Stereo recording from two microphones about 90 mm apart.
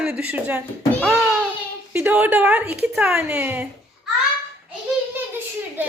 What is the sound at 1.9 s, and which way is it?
A woman's voice, 15° right (ahead or behind).